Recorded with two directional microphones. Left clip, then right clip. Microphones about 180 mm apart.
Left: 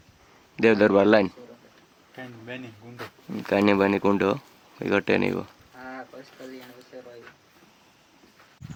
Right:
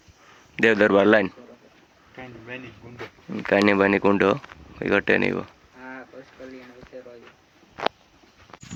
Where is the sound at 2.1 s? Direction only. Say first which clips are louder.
Right 1 dB; 80° left.